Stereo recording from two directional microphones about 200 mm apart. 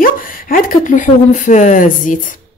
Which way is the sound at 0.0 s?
45° left (ahead or behind).